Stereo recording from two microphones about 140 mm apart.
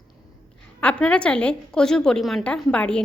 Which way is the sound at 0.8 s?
10° left (ahead or behind).